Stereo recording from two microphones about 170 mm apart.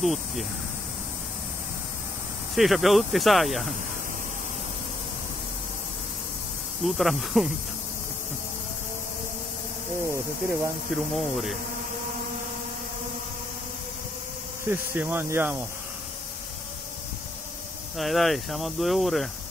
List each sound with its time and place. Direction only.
0.0 s speech: centre (ahead or behind)
2.5 s speech: centre (ahead or behind)
6.8 s speech: centre (ahead or behind)
10.0 s speech: 15° right (ahead or behind)
11.1 s speech: centre (ahead or behind)
14.6 s speech: 15° right (ahead or behind)
17.9 s speech: centre (ahead or behind)